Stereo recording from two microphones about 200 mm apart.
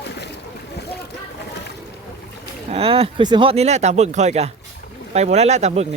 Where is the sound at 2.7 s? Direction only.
30° right (ahead or behind).